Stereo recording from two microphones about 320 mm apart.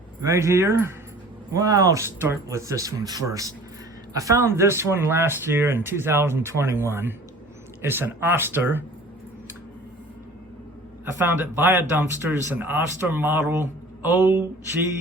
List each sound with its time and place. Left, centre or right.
0.2 s speech: centre
11.0 s speech: centre